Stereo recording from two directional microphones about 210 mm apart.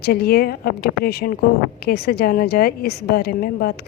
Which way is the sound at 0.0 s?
50° left (ahead or behind).